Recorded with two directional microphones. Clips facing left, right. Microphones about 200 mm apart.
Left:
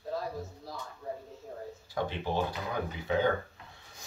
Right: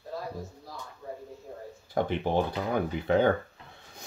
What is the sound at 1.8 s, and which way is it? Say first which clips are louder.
Speech: right 6 dB; 55° right (ahead or behind).